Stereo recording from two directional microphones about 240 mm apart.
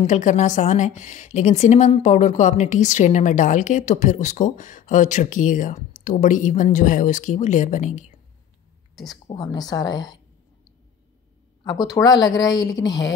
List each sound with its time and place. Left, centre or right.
0.0 s a woman's voice: left
8.9 s a woman's voice: centre
9.3 s speech: centre
11.6 s speech: centre